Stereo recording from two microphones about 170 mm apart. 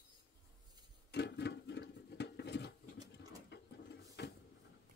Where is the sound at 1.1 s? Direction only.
80° left.